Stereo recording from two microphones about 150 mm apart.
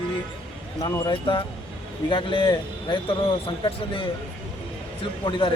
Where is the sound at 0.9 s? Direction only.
30° left (ahead or behind).